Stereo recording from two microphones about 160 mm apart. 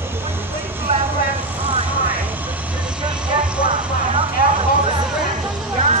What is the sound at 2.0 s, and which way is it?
Vehicle, 10° right (ahead or behind).